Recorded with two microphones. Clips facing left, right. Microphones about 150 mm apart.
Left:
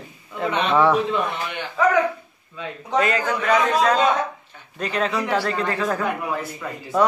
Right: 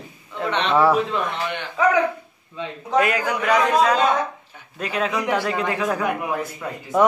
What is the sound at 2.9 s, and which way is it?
A man's voice, 10° right (ahead or behind).